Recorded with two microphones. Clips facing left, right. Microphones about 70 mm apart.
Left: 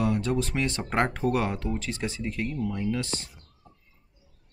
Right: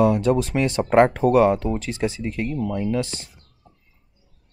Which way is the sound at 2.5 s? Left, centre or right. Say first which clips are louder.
Right 5 dB; right.